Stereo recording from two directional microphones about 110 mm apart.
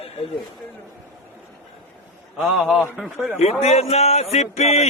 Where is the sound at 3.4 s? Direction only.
80° left.